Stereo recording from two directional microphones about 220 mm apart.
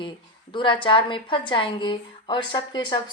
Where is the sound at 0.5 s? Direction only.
20° left (ahead or behind).